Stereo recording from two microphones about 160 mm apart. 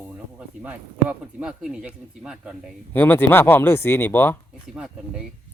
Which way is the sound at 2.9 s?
10° left (ahead or behind).